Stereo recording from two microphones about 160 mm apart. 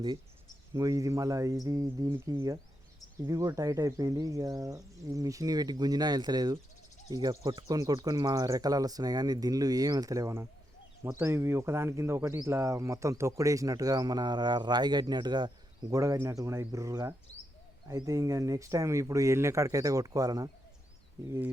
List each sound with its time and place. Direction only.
0.7 s speech: 20° right (ahead or behind)